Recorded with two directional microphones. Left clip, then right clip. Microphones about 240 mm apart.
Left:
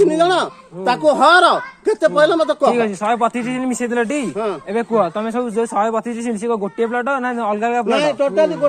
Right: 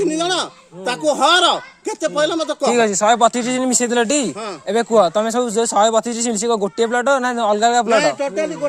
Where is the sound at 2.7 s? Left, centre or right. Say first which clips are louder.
Right 2 dB; right.